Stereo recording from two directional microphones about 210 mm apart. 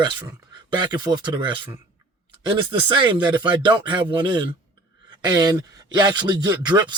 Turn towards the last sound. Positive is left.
turn(degrees=-20)  # may be behind; listen again after turning